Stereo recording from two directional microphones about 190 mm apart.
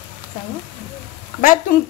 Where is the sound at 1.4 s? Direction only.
45° left (ahead or behind).